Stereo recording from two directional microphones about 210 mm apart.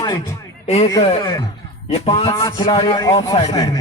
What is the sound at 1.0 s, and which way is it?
A man's voice, 30° left (ahead or behind).